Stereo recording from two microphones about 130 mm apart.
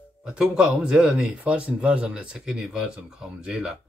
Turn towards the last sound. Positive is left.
turn(degrees=-5)  # may be behind; listen again after turning